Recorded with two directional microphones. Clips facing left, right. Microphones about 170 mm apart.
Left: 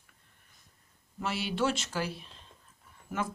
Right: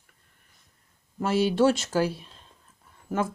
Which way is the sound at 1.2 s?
45° right (ahead or behind).